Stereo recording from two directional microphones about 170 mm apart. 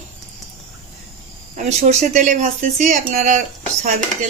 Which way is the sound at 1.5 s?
45° right (ahead or behind).